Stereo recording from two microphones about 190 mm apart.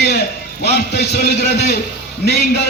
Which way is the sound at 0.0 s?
60° left (ahead or behind).